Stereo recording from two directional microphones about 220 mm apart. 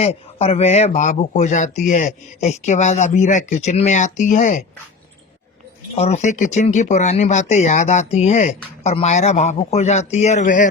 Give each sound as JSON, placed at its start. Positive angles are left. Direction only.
{"t": 0.0, "sound": "speech", "side_deg": 30}
{"t": 6.0, "sound": "speech", "side_deg": 30}